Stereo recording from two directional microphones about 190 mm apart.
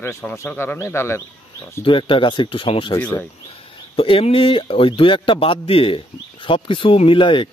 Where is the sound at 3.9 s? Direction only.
30° left (ahead or behind).